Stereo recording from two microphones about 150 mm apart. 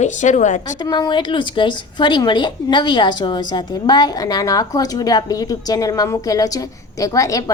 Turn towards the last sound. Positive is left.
turn(degrees=20)  # may be behind; listen again after turning